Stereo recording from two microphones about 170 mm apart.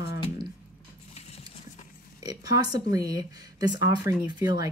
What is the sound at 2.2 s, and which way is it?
Speech, 20° right (ahead or behind).